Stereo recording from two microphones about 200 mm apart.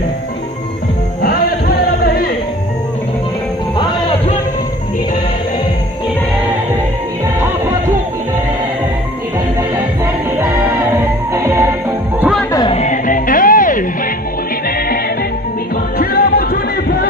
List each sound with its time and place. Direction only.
10.4 s music: 15° right (ahead or behind)
12.2 s music: centre (ahead or behind)
12.5 s music: 30° left (ahead or behind)
16.0 s music: 50° left (ahead or behind)